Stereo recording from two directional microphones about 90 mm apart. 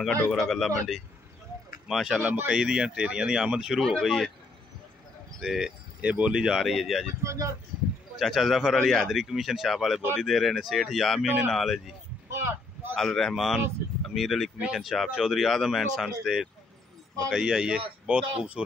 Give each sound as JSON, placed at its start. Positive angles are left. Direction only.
{"t": 0.3, "sound": "a man's voice", "side_deg": 5}
{"t": 2.2, "sound": "speech", "side_deg": -20}
{"t": 2.6, "sound": "speech", "side_deg": -10}
{"t": 3.8, "sound": "a man's voice", "side_deg": 5}
{"t": 5.4, "sound": "a man's voice", "side_deg": -5}
{"t": 5.9, "sound": "speech", "side_deg": -15}
{"t": 7.2, "sound": "speech", "side_deg": -35}
{"t": 8.2, "sound": "a man's voice", "side_deg": 0}
{"t": 11.2, "sound": "speech", "side_deg": -15}
{"t": 11.5, "sound": "a man's voice", "side_deg": 0}
{"t": 12.3, "sound": "a sound", "side_deg": -30}
{"t": 12.9, "sound": "a man's voice", "side_deg": 5}